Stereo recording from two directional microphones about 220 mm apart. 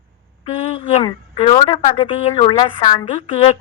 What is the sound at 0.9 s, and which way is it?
A woman's voice, 30° left (ahead or behind).